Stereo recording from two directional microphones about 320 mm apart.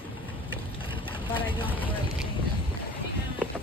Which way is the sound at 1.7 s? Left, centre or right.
Centre.